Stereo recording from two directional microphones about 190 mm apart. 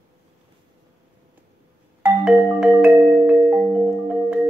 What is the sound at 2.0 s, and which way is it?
Music, 5° right (ahead or behind).